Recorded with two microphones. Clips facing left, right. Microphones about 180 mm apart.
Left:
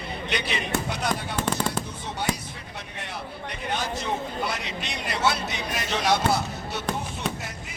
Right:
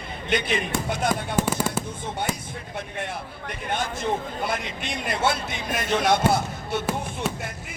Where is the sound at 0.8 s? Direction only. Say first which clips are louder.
Right 4 dB; 50° right (ahead or behind).